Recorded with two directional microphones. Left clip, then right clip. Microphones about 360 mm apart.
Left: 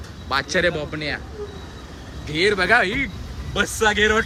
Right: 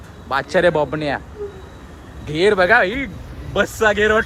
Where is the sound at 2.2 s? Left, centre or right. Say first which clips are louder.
Right 4 dB; centre.